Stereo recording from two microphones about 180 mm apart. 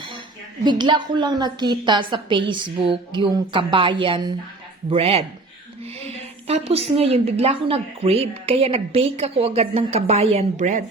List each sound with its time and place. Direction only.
0.6 s a woman's voice: 25° right (ahead or behind); by 10.8 s 40° right (ahead or behind)